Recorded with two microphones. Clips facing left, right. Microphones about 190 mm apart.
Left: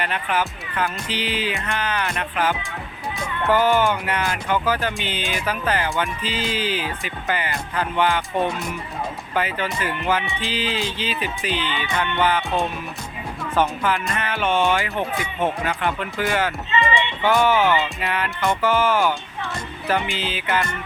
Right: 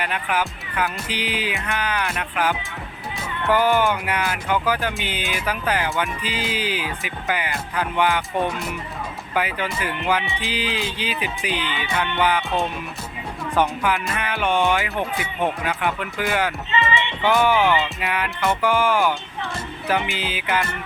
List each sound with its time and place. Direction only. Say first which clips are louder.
0.0 s music: left 1 dB; 10° right (ahead or behind)
9.3 s music: even; 10° right (ahead or behind)
13.6 s music: even; 10° right (ahead or behind)